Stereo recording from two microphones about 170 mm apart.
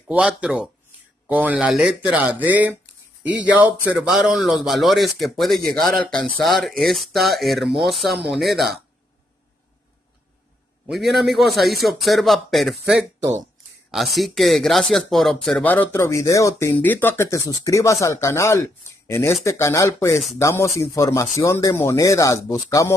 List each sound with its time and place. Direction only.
0.1 s speech: 5° right (ahead or behind)
10.9 s speech: centre (ahead or behind); by 22.9 s 20° left (ahead or behind)